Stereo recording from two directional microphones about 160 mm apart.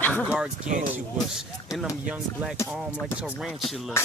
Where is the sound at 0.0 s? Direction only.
10° left (ahead or behind).